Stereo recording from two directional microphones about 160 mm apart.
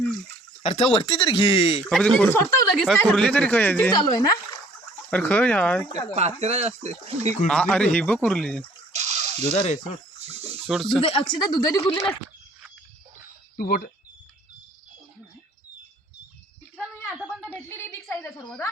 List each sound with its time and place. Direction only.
0.6 s speech: 40° left (ahead or behind)
1.9 s speech: 5° left (ahead or behind)
2.8 s speech: 5° left (ahead or behind)
4.1 s speech: 25° left (ahead or behind)
5.1 s speech: 10° left (ahead or behind)
6.1 s speech: 40° right (ahead or behind)
7.4 s speech: 5° left (ahead or behind)
8.9 s water: 45° right (ahead or behind)
9.5 s speech: 40° left (ahead or behind)
10.2 s a sound: 40° right (ahead or behind)
11.0 s speech: 35° left (ahead or behind)
13.6 s speech: 70° left (ahead or behind)
17.1 s a sound: 5° right (ahead or behind)
17.9 s a sound: 10° left (ahead or behind)